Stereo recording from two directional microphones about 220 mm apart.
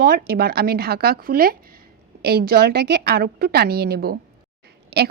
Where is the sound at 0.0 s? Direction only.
40° right (ahead or behind).